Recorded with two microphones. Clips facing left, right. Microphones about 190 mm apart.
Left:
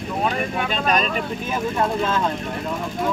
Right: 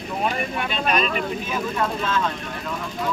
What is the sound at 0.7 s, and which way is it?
Speech, 40° left (ahead or behind).